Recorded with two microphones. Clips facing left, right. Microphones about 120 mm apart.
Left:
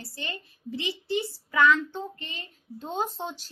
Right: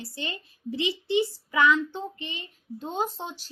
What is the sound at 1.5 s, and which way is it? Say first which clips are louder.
Speech: left 1 dB; 10° right (ahead or behind).